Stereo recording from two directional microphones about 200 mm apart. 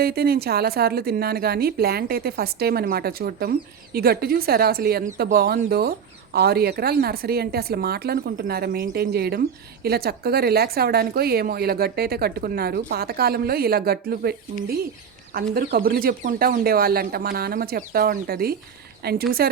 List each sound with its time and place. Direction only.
0.0 s a woman's voice: 50° right (ahead or behind)